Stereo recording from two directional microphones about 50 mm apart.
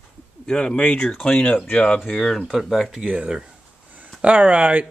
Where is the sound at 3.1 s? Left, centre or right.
Centre.